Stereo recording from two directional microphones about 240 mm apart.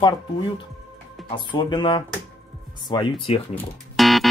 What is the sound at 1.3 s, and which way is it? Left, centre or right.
Speech, centre.